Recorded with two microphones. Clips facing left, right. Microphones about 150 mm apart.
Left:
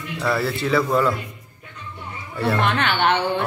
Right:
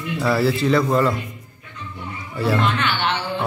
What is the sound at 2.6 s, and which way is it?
Speech, 55° left (ahead or behind).